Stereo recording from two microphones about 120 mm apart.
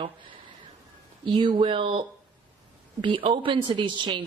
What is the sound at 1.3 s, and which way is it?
A woman's voice, 40° right (ahead or behind).